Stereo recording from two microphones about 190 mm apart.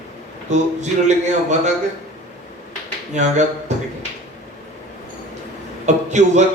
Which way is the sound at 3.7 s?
40° right (ahead or behind).